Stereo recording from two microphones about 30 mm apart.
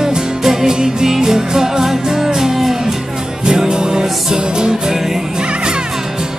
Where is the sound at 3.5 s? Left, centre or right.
Right.